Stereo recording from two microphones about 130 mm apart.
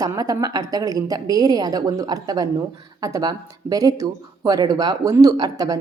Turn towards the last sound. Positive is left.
turn(degrees=-25)  # may be behind; listen again after turning